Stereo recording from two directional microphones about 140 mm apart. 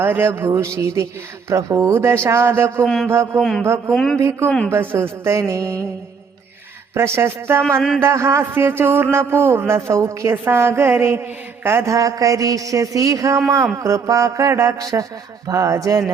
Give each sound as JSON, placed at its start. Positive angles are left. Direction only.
{"t": 0.0, "sound": "a woman's voice", "side_deg": -15}
{"t": 2.8, "sound": "a man's voice", "side_deg": 5}
{"t": 4.2, "sound": "speech", "side_deg": -15}
{"t": 4.4, "sound": "speech", "side_deg": 5}
{"t": 4.7, "sound": "a woman's voice", "side_deg": -15}
{"t": 6.9, "sound": "speech", "side_deg": -20}
{"t": 7.8, "sound": "a man's voice", "side_deg": 5}
{"t": 8.0, "sound": "a woman's voice", "side_deg": -20}